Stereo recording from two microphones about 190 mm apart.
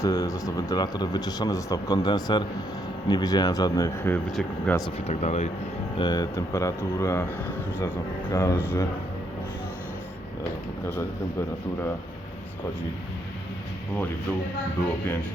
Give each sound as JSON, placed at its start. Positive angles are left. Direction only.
{"t": 0.0, "sound": "speech", "side_deg": 20}
{"t": 5.0, "sound": "speech", "side_deg": 35}
{"t": 6.0, "sound": "speech", "side_deg": 20}
{"t": 10.8, "sound": "speech", "side_deg": 15}